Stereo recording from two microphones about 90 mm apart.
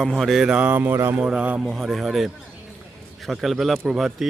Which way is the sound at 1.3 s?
15° right (ahead or behind).